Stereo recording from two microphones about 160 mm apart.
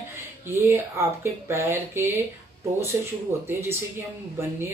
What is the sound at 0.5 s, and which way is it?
Speech, 15° right (ahead or behind).